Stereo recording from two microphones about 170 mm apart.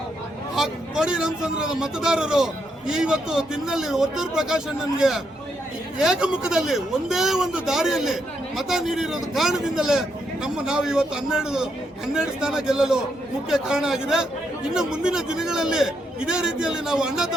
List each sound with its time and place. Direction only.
0.5 s speech: 5° right (ahead or behind)